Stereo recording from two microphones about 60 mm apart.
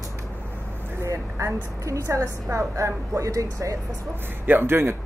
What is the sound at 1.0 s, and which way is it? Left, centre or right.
A woman's voice, right.